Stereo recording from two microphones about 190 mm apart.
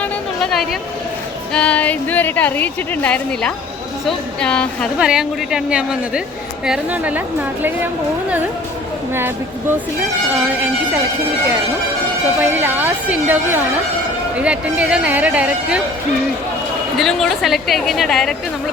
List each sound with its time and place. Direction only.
0.0 s a sound: 5° left (ahead or behind)
1.5 s a woman's voice: 5° left (ahead or behind)
12.4 s speech: 10° right (ahead or behind)
17.0 s a woman's voice: centre (ahead or behind)